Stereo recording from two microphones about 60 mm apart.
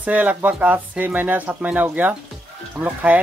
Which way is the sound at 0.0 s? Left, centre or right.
Right.